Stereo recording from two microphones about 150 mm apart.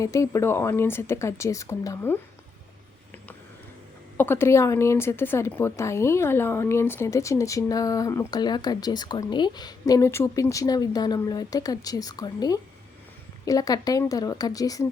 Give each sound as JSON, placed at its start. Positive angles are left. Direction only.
{"t": 0.0, "sound": "a woman's voice", "side_deg": 20}
{"t": 4.2, "sound": "a woman's voice", "side_deg": 15}